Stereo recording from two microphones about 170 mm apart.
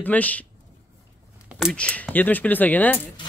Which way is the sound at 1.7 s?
5° left (ahead or behind).